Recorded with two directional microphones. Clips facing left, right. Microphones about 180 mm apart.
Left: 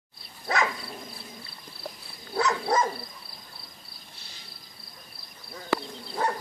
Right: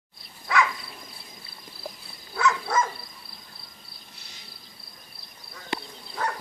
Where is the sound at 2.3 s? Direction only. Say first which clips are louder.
Even; 35° left (ahead or behind).